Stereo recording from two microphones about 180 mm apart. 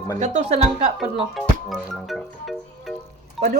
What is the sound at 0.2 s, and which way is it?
Speech, 40° right (ahead or behind).